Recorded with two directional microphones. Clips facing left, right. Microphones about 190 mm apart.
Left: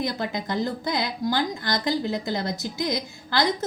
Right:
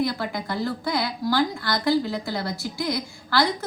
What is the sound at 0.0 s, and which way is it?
A woman's voice, 20° left (ahead or behind).